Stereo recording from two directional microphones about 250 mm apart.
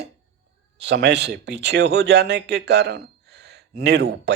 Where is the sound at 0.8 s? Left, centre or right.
Right.